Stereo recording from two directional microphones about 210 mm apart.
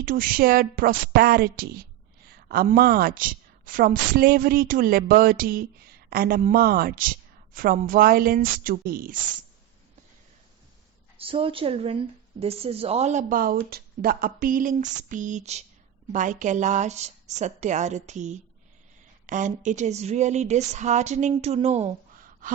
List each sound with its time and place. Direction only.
0.0 s a woman's voice: 40° right (ahead or behind)
11.2 s speech: 25° right (ahead or behind)